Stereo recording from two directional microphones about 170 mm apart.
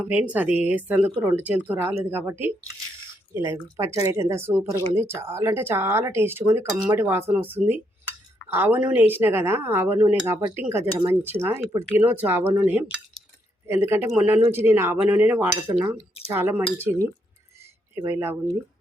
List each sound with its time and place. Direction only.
0.0 s speech: 10° right (ahead or behind)
17.9 s speech: 15° right (ahead or behind)